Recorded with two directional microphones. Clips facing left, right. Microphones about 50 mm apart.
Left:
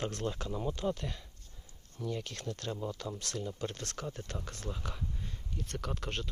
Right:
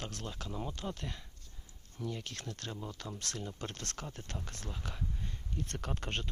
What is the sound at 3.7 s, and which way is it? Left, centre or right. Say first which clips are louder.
Speech: left 1 dB; centre.